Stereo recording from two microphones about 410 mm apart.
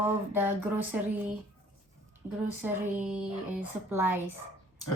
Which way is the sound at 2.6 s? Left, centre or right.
Centre.